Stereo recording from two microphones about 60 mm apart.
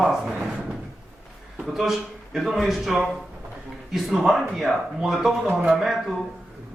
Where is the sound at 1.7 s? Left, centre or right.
Centre.